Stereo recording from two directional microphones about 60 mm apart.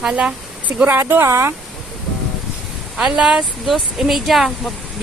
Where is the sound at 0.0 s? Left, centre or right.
Centre.